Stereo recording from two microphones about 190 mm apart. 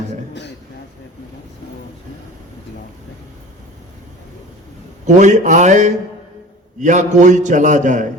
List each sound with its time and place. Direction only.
5.0 s a man's voice: 40° right (ahead or behind)